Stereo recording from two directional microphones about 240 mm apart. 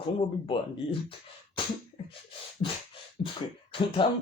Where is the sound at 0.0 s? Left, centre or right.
Left.